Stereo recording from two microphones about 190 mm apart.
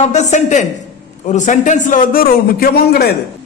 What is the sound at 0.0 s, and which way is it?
A man's voice, 40° left (ahead or behind).